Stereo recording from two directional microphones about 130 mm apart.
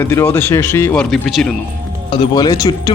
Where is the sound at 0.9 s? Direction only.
5° left (ahead or behind).